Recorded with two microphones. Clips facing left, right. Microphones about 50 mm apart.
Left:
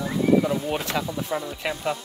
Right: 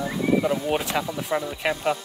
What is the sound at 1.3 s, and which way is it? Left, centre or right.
Speech, right.